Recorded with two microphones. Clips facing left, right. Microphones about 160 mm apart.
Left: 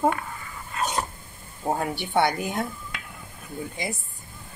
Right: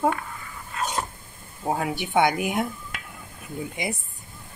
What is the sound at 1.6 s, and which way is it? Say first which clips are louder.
Speech: even; centre (ahead or behind).